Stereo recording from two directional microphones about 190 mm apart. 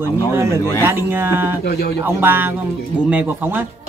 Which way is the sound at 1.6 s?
55° left (ahead or behind).